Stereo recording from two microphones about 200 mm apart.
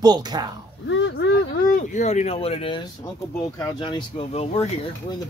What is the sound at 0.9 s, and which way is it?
Speech, 65° left (ahead or behind).